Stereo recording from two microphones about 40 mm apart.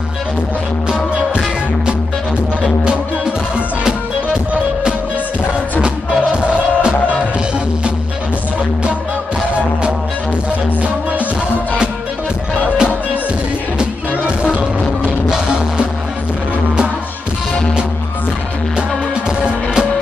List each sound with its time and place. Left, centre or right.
2.8 s music: right
6.3 s music: right
13.7 s music: right
19.4 s music: right